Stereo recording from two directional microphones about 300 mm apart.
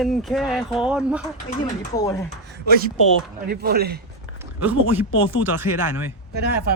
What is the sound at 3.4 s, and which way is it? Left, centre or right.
Speech, right.